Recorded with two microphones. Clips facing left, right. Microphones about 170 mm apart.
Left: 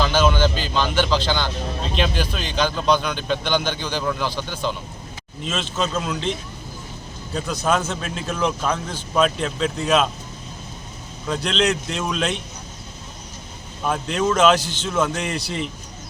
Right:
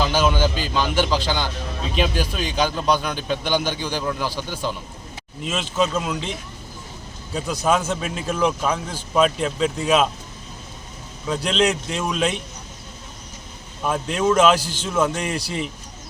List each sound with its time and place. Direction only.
0.0 s a man's voice: 10° right (ahead or behind)
7.3 s a man's voice: 10° right (ahead or behind)
11.3 s a man's voice: 5° right (ahead or behind)
13.8 s a man's voice: 5° right (ahead or behind)